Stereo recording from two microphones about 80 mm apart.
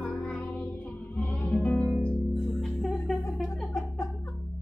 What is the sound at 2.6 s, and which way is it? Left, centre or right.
Music, centre.